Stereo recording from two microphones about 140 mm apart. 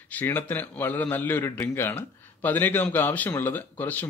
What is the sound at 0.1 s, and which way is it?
A man's voice, 15° left (ahead or behind).